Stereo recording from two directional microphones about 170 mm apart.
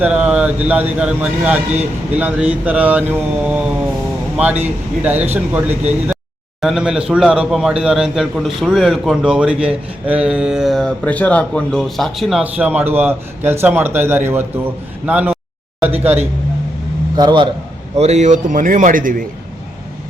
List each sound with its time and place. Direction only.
0.0 s a man's voice: 5° right (ahead or behind)
17.2 s a man's voice: 25° right (ahead or behind)
17.9 s a man's voice: 40° right (ahead or behind)